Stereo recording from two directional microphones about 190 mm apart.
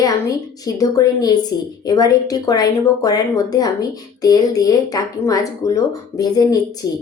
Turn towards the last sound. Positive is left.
turn(degrees=20)  # may be behind; listen again after turning